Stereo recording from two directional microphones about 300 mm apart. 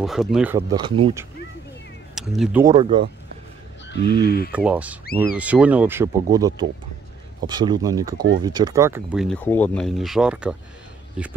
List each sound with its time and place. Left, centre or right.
0.0 s speech: centre
2.1 s speech: centre
3.9 s speech: left
4.5 s speech: centre